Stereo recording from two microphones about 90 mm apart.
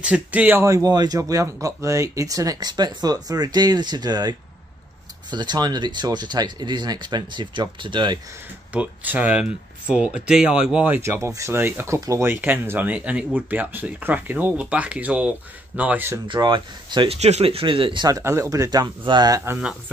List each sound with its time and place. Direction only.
0.0 s speech: 15° right (ahead or behind)
0.6 s speech: 35° right (ahead or behind); by 8.2 s 60° right (ahead or behind)
8.7 s speech: 15° right (ahead or behind)
11.2 s speech: 35° right (ahead or behind); by 16.1 s 15° right (ahead or behind)
16.3 s speech: 60° right (ahead or behind)
18.2 s speech: 30° right (ahead or behind); by 19.4 s 50° right (ahead or behind)